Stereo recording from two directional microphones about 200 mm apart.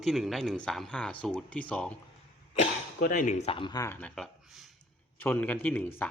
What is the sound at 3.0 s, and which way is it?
Speech, 45° left (ahead or behind).